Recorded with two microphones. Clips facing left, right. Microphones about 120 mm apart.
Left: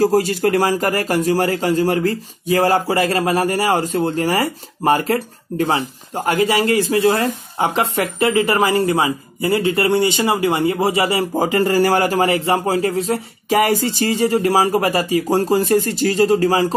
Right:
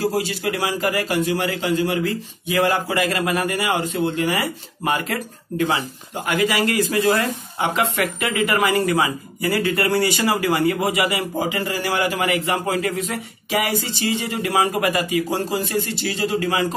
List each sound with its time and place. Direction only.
0.0 s a man's voice: 45° left (ahead or behind)
11.4 s a man's voice: 45° left (ahead or behind)